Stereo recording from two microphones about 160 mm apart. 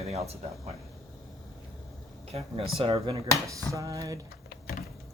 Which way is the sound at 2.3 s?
40° right (ahead or behind).